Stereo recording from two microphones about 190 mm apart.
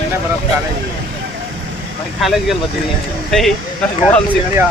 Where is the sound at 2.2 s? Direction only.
Centre (ahead or behind).